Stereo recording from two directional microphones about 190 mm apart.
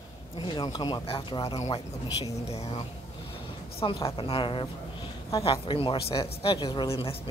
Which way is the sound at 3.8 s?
30° left (ahead or behind).